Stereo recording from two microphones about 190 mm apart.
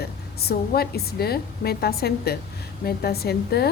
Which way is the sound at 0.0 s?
55° left (ahead or behind).